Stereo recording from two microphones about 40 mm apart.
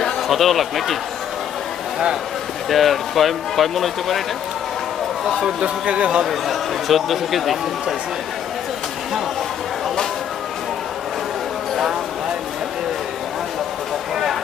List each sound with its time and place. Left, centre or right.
0.3 s speech: centre
2.7 s speech: centre
5.2 s speech: centre
5.9 s a man's voice: right
6.2 s speech: centre